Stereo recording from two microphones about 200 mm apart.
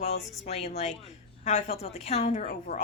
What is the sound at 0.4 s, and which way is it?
A woman's voice, 30° left (ahead or behind).